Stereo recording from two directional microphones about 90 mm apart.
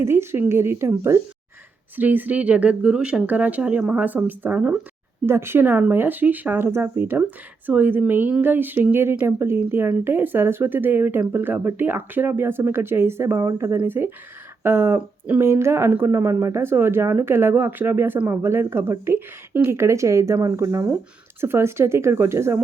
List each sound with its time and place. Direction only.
0.0 s speech: 30° right (ahead or behind)
5.2 s speech: 25° right (ahead or behind)